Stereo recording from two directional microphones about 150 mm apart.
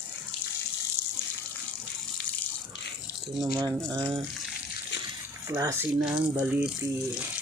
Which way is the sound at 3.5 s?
20° right (ahead or behind).